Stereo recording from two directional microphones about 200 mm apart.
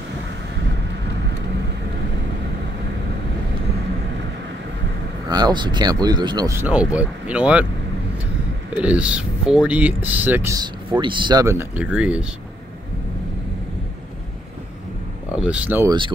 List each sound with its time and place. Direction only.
5.3 s speech: 20° right (ahead or behind)
8.7 s speech: 5° right (ahead or behind)
15.3 s speech: 5° right (ahead or behind)